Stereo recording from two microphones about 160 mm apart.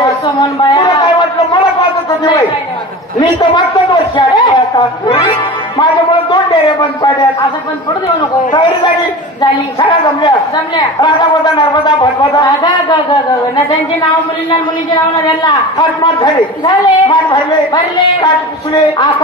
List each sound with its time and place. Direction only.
0.0 s a sound: 20° left (ahead or behind)
3.2 s a man's voice: 25° left (ahead or behind)
8.5 s speech: 30° left (ahead or behind)
15.4 s speech: 30° left (ahead or behind)